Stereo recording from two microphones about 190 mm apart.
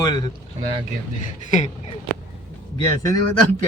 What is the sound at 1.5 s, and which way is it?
Speech, 40° left (ahead or behind).